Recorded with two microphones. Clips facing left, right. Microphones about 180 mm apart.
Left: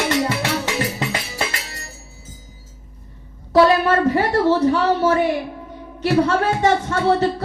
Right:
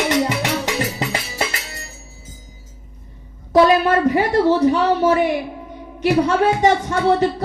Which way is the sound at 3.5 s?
15° right (ahead or behind).